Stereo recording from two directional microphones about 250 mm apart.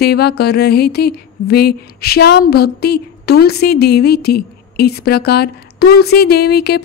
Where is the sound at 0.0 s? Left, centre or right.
Left.